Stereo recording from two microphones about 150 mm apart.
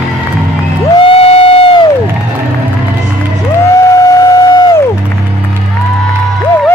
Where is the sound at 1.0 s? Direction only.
40° left (ahead or behind).